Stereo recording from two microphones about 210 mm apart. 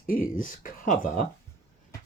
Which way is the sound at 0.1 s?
40° left (ahead or behind).